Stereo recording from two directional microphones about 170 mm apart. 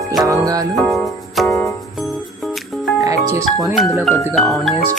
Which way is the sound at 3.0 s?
20° right (ahead or behind).